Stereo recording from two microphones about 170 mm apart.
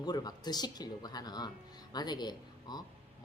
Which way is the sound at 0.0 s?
25° left (ahead or behind).